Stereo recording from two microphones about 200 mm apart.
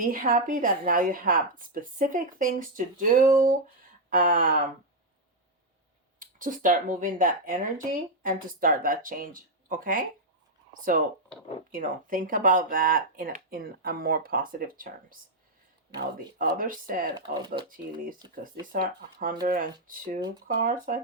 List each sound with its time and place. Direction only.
0.0 s speech: 45° right (ahead or behind)
6.1 s speech: 40° right (ahead or behind)
17.2 s speech: 20° right (ahead or behind)
18.7 s speech: 45° right (ahead or behind)